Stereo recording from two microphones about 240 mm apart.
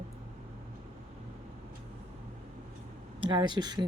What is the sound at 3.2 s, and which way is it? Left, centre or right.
Speech, centre.